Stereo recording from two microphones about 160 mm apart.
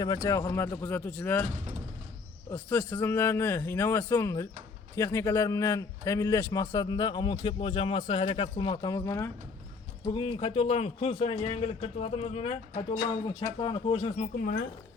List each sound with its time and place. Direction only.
0.2 s speech: 20° left (ahead or behind)
2.5 s a man's voice: 15° left (ahead or behind)
10.1 s speech: 30° left (ahead or behind)
14.3 s speech: 65° left (ahead or behind)